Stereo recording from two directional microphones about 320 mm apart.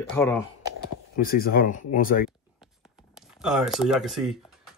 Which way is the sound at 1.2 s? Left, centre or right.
Left.